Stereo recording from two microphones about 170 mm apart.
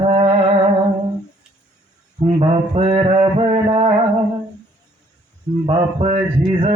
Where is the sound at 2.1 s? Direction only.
35° right (ahead or behind).